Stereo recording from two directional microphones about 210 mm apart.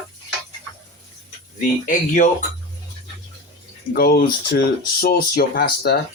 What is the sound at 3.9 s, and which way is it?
Speech, 45° left (ahead or behind).